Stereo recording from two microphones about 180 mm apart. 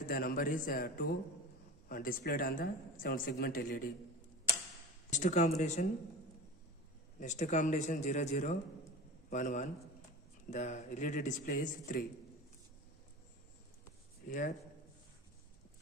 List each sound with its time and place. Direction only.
0.0 s speech: 55° left (ahead or behind)
5.1 s speech: 40° left (ahead or behind)
7.2 s speech: 45° left (ahead or behind)
14.2 s speech: 50° left (ahead or behind)